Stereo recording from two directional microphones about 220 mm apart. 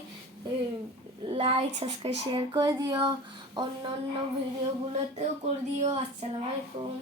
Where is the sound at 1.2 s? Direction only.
25° right (ahead or behind).